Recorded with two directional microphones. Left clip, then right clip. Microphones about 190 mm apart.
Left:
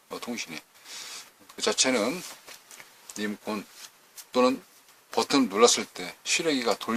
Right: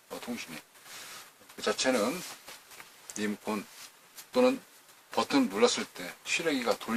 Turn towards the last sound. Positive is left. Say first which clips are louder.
# left 4 dB
turn(degrees=40)  # may be behind; listen again after turning